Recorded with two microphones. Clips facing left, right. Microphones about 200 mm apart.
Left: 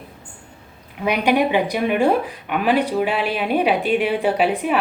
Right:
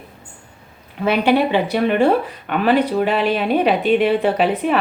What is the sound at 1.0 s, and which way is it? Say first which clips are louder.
Speech: right 2 dB; 15° left (ahead or behind).